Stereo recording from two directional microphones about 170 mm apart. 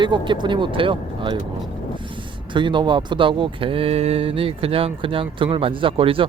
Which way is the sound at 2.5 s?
30° right (ahead or behind).